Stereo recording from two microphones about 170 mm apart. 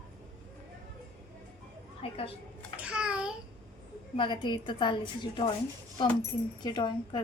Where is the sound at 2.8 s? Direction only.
5° right (ahead or behind).